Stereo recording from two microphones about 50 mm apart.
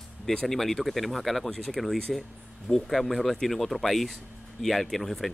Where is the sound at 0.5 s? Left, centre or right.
Centre.